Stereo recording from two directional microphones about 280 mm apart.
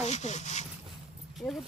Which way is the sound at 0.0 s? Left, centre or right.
Left.